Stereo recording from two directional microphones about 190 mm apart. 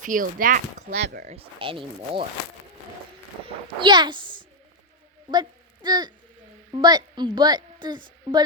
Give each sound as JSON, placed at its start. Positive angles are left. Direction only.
{"t": 0.0, "sound": "speech", "side_deg": -45}
{"t": 1.2, "sound": "a woman's voice", "side_deg": -35}
{"t": 3.4, "sound": "a woman's voice", "side_deg": -25}